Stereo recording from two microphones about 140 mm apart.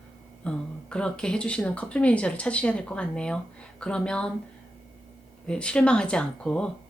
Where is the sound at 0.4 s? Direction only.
5° left (ahead or behind).